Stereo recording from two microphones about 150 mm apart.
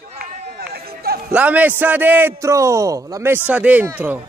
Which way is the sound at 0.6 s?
90° right.